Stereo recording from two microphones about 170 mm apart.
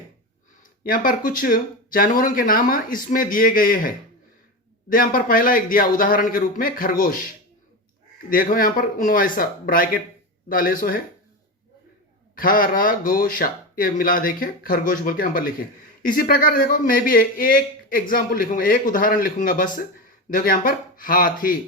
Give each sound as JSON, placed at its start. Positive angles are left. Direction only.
{"t": 0.9, "sound": "a man's voice", "side_deg": 55}
{"t": 8.3, "sound": "a man's voice", "side_deg": 55}
{"t": 12.4, "sound": "a man's voice", "side_deg": 55}